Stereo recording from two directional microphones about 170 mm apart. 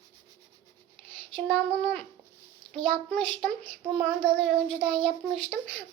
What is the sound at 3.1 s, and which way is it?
A child's voice, 5° left (ahead or behind).